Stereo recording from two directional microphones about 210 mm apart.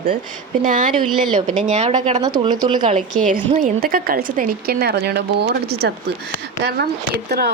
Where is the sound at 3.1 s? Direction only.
40° right (ahead or behind).